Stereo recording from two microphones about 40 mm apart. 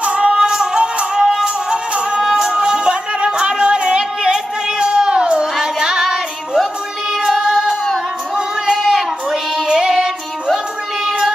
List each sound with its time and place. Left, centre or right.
0.0 s music: right; by 1.5 s centre
1.7 s music: right
3.6 s a sound: right
7.2 s music: centre
8.4 s child singing: centre
9.7 s music: centre
11.1 s child singing: centre